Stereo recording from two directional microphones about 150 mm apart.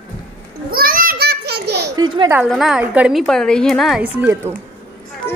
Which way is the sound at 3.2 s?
5° left (ahead or behind).